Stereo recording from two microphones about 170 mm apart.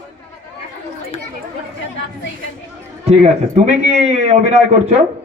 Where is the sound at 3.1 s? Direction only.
40° right (ahead or behind).